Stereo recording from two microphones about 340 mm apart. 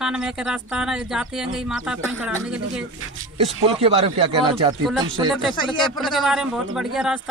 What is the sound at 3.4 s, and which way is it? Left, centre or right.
A woman's voice, centre.